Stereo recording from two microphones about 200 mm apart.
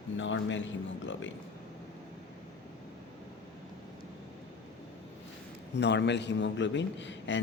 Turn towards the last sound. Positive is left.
turn(degrees=65)  # may be behind; listen again after turning